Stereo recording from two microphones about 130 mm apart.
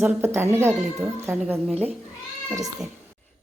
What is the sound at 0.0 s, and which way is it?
Speech, 20° right (ahead or behind).